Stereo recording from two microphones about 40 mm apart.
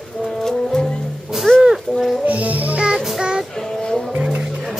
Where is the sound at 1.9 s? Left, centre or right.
Right.